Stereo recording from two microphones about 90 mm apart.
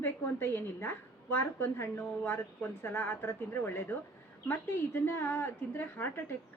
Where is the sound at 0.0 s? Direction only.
25° left (ahead or behind).